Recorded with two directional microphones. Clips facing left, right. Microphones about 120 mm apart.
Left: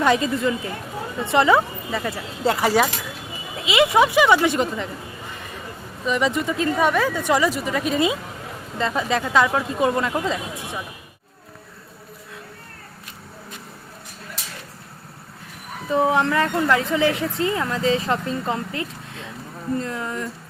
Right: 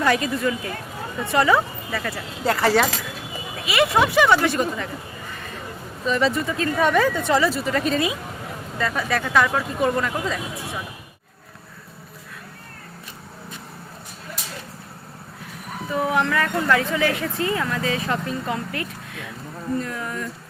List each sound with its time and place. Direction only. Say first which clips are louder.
0.0 s a woman's voice: left 2 dB; 20° left (ahead or behind)
2.6 s a woman's voice: right 3 dB; 10° left (ahead or behind)
6.1 s speech: even; 15° left (ahead or behind)
7.9 s a woman's voice: left 2 dB; 25° left (ahead or behind)
15.9 s a woman's voice: left 3 dB; 25° left (ahead or behind)